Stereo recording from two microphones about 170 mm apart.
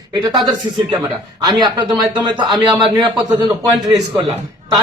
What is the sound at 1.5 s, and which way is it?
Speech, 25° right (ahead or behind).